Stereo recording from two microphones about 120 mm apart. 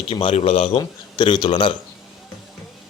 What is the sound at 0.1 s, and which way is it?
Speech, 50° left (ahead or behind).